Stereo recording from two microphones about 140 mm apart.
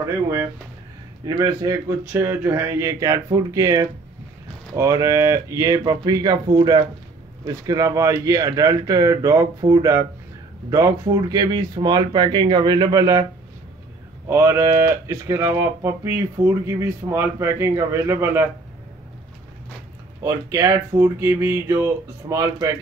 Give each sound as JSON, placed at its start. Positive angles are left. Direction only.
{"t": 1.2, "sound": "speech", "side_deg": -25}
{"t": 20.2, "sound": "speech", "side_deg": -20}